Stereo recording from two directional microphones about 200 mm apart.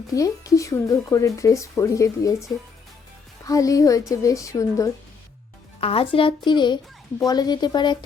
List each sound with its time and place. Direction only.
0.1 s speech: 15° left (ahead or behind)
5.8 s a woman's voice: 30° left (ahead or behind)